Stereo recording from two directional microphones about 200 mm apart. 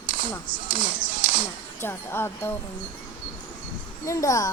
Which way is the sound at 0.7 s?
45° right (ahead or behind).